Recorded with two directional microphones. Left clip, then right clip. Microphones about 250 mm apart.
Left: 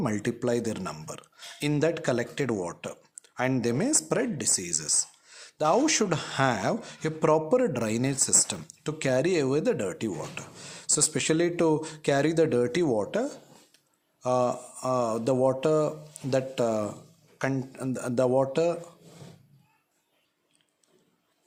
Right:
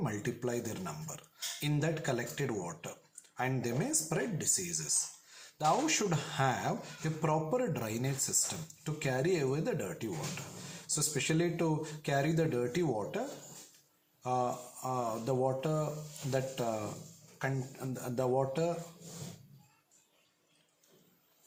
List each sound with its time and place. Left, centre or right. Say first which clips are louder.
0.0 s speech: left 8 dB; left